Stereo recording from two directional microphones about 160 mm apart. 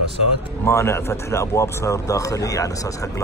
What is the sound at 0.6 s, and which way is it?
Speech, 15° left (ahead or behind).